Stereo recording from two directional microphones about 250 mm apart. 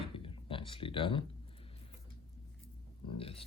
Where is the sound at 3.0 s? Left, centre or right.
Left.